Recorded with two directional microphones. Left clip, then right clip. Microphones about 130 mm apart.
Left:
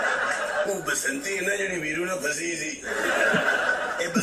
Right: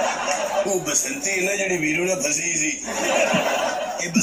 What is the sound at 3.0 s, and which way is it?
Male singing, 20° right (ahead or behind).